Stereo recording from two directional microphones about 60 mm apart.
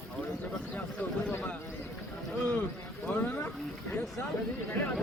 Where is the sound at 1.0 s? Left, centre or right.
Left.